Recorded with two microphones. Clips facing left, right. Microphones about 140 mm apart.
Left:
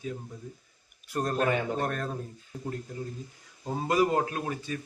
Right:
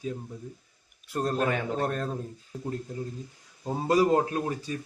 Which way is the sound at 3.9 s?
35° right (ahead or behind).